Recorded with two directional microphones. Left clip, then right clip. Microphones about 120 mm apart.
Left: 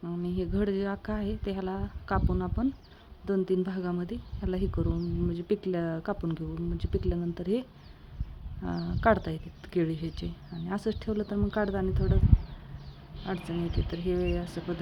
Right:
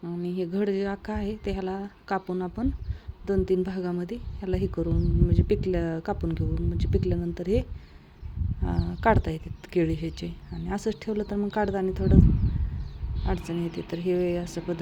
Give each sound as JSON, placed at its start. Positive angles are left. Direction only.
{"t": 0.0, "sound": "speech", "side_deg": 0}
{"t": 13.3, "sound": "speech", "side_deg": -15}